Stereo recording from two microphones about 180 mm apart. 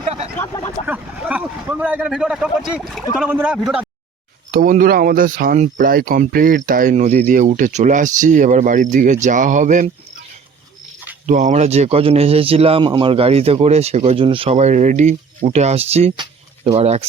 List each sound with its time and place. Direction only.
0.3 s a sound: 15° left (ahead or behind)
0.9 s speech: 5° right (ahead or behind)
4.5 s speech: 50° right (ahead or behind)
11.3 s speech: 40° right (ahead or behind)